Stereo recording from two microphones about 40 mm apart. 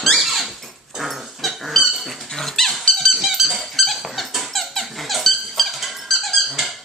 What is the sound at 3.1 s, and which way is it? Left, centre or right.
Squeak, centre.